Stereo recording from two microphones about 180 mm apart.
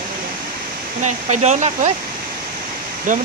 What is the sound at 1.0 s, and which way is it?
Speech, 40° right (ahead or behind).